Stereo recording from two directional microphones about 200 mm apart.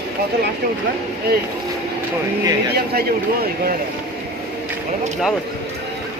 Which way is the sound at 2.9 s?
50° right (ahead or behind).